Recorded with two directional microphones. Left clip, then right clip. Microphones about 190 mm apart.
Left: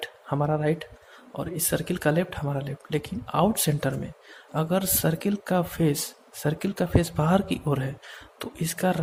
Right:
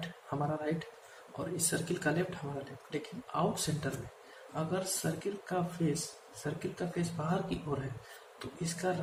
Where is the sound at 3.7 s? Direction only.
55° left (ahead or behind).